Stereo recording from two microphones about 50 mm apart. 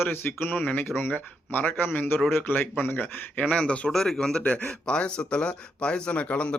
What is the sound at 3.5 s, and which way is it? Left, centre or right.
Speech, centre.